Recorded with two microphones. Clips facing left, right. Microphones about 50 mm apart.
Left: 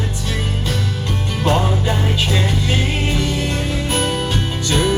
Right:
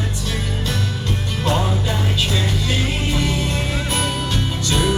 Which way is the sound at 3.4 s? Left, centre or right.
Left.